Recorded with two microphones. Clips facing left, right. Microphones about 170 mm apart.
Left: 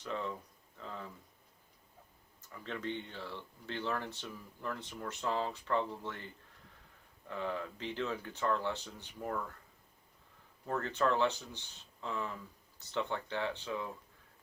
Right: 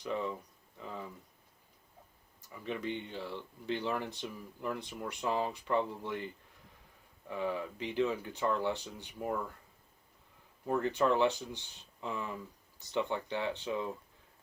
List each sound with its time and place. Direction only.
0.0 s speech: 10° right (ahead or behind)
2.5 s speech: 15° right (ahead or behind)
7.3 s speech: 10° right (ahead or behind)
10.7 s speech: 15° right (ahead or behind)